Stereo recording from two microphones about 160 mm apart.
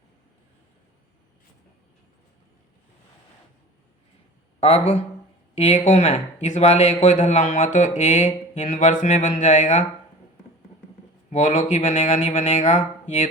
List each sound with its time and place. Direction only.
4.6 s speech: 40° left (ahead or behind)
11.3 s speech: 50° left (ahead or behind)